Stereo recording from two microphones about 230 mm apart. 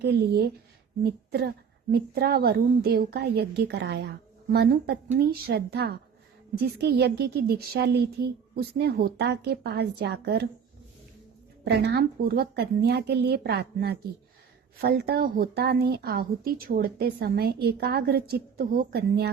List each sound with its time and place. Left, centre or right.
0.0 s a woman's voice: right
11.6 s a woman's voice: right